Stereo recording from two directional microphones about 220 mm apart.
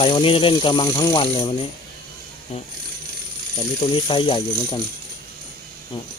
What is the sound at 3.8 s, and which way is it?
Speech, 20° left (ahead or behind).